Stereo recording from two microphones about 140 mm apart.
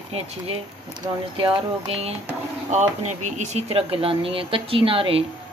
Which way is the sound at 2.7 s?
55° right (ahead or behind).